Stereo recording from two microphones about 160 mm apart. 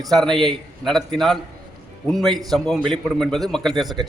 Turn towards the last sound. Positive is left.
turn(degrees=0)  # may be behind; listen again after turning